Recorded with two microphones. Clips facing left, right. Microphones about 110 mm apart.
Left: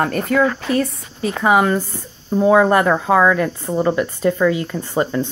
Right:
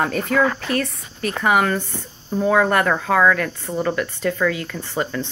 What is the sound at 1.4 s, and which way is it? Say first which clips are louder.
Speech: left 3 dB; 20° left (ahead or behind).